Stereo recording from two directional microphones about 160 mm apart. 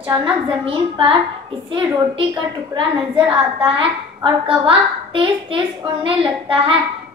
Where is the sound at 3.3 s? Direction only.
30° right (ahead or behind).